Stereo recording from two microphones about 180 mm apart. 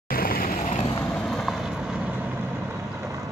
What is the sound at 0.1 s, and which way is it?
Vehicle, 55° left (ahead or behind).